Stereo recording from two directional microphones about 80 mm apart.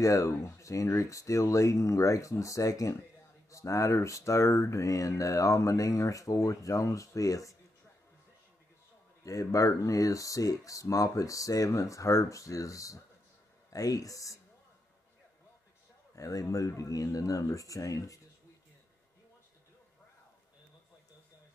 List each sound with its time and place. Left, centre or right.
0.0 s speech: left
9.2 s speech: left
16.2 s speech: left